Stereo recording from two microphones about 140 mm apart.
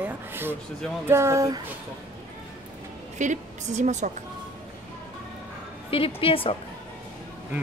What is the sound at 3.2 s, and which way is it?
Speech, 60° right (ahead or behind).